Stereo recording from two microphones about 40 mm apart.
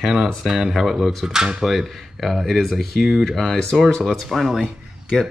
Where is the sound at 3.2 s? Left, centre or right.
Centre.